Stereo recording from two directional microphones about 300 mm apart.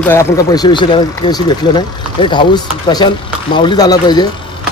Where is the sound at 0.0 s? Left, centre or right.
Centre.